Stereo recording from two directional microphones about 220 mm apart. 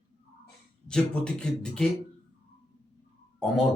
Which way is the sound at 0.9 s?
5° left (ahead or behind).